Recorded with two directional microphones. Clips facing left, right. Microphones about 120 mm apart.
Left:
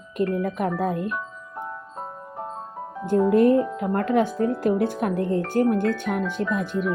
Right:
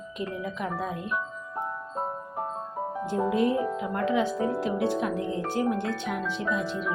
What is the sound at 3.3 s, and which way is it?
Speech, 55° left (ahead or behind).